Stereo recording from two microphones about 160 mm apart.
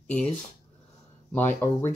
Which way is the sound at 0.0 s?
5° left (ahead or behind).